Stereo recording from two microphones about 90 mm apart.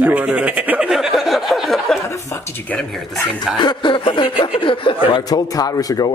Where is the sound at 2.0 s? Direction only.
35° left (ahead or behind).